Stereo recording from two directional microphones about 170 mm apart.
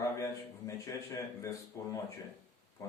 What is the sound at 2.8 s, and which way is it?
Pig, 20° left (ahead or behind).